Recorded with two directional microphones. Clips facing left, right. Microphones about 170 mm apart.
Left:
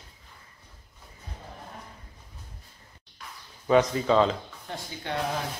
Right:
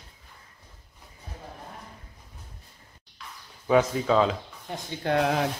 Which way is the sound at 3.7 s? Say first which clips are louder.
Even; 5° right (ahead or behind).